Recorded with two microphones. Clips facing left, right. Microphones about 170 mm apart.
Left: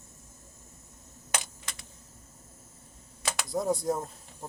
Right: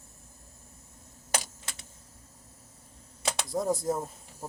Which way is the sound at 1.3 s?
30° right (ahead or behind).